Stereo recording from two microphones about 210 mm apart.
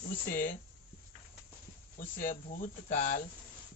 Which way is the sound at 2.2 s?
40° left (ahead or behind).